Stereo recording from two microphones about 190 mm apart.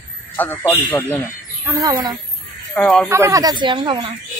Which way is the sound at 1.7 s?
20° right (ahead or behind).